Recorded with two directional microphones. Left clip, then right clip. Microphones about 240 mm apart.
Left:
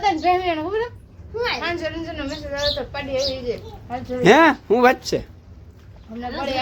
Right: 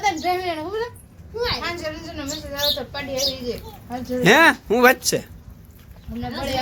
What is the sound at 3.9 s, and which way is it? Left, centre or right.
Speech, centre.